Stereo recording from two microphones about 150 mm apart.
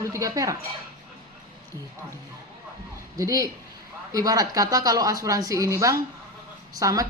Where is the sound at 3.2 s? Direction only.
20° right (ahead or behind).